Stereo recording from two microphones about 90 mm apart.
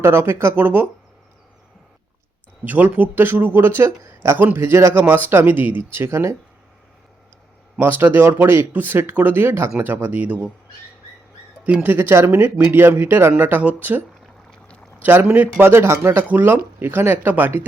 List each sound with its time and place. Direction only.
0.0 s speech: 30° right (ahead or behind)
2.6 s speech: 15° right (ahead or behind)
7.8 s speech: 25° right (ahead or behind)
11.6 s speech: 15° right (ahead or behind)